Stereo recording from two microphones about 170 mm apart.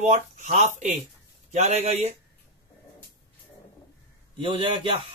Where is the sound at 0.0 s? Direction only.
45° right (ahead or behind).